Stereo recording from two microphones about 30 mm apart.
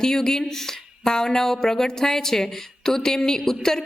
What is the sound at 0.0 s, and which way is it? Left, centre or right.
Speech, centre.